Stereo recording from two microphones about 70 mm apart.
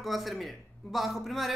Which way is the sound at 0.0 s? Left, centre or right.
Centre.